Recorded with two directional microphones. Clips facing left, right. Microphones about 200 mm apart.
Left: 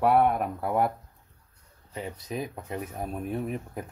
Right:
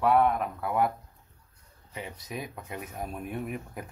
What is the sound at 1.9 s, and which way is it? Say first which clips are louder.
Speech: left 4 dB; 35° left (ahead or behind).